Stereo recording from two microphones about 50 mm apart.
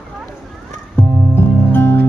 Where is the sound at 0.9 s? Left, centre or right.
Left.